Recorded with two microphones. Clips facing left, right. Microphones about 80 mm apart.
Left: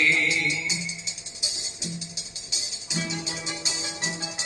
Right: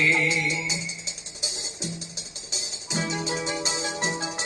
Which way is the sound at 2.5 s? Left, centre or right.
Right.